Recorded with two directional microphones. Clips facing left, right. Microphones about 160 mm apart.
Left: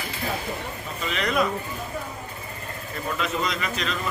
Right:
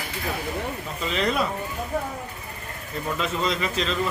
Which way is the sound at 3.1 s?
30° right (ahead or behind).